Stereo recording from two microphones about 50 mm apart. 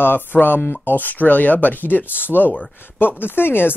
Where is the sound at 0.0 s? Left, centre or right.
Left.